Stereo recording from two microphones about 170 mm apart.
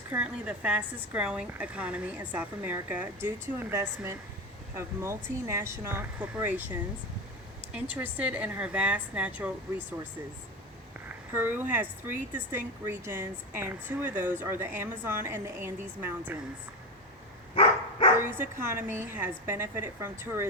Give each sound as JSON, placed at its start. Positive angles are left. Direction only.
{"t": 0.1, "sound": "speech", "side_deg": -5}
{"t": 11.3, "sound": "speech", "side_deg": -10}
{"t": 17.5, "sound": "dog", "side_deg": 35}
{"t": 18.2, "sound": "speech", "side_deg": -15}